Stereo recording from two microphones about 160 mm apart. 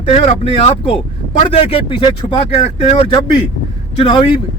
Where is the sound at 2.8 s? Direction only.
40° left (ahead or behind).